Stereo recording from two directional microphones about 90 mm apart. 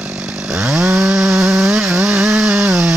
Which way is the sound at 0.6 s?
10° right (ahead or behind).